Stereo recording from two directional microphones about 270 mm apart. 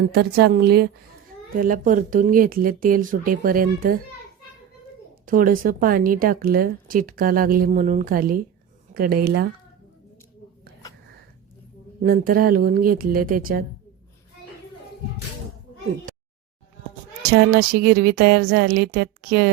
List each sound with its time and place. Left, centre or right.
0.0 s a woman's voice: right
5.2 s a woman's voice: right
12.0 s a woman's voice: right
17.3 s a woman's voice: right